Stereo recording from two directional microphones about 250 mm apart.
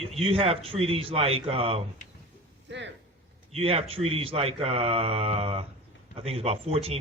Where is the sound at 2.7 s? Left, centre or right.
Right.